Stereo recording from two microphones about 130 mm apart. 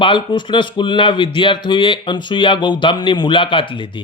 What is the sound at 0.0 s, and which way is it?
Speech, 40° left (ahead or behind).